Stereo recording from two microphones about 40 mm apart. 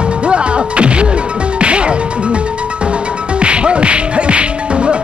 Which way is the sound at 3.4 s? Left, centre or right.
Right.